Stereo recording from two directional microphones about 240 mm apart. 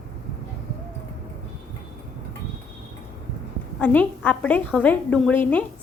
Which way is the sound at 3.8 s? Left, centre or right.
Centre.